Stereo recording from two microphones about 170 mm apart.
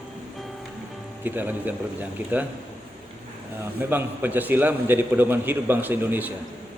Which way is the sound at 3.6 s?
10° right (ahead or behind).